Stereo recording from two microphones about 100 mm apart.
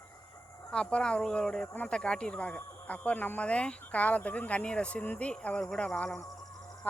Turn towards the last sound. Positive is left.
turn(degrees=15)  # may be behind; listen again after turning